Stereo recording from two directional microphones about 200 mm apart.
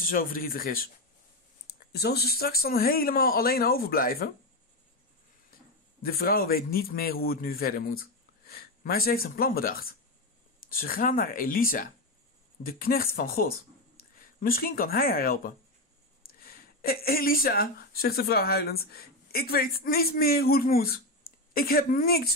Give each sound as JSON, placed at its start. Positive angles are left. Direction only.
{"t": 0.0, "sound": "a man's voice", "side_deg": 45}
{"t": 6.0, "sound": "a man's voice", "side_deg": 45}